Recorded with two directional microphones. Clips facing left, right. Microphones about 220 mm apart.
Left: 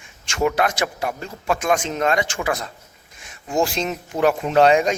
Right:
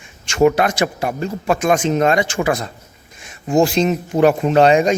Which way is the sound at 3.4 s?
25° right (ahead or behind).